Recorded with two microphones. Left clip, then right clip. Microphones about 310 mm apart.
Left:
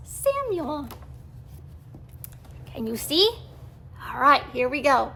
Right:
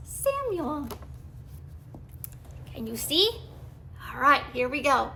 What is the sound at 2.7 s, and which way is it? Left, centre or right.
A woman's voice, centre.